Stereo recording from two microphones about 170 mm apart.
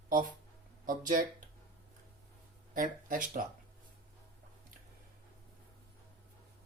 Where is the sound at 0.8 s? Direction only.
55° right (ahead or behind).